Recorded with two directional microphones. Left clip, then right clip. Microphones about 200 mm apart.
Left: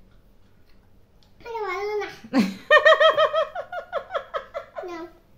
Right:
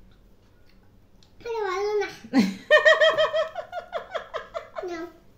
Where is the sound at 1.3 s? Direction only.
10° left (ahead or behind).